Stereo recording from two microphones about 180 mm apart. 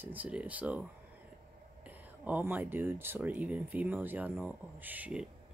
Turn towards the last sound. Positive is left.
turn(degrees=-5)  # may be behind; listen again after turning